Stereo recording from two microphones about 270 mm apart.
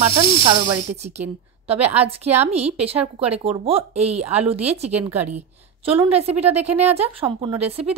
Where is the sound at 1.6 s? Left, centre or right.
Right.